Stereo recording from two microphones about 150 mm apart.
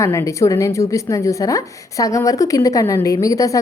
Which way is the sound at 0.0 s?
20° left (ahead or behind).